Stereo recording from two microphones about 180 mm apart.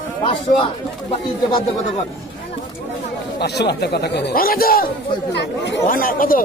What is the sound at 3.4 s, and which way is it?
Speech, 65° left (ahead or behind).